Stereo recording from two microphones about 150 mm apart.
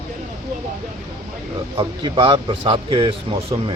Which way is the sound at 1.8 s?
35° right (ahead or behind).